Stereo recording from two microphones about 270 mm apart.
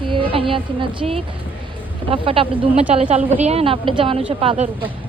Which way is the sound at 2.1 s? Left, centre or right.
Right.